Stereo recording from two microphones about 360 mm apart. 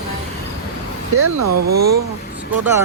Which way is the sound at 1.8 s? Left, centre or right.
Right.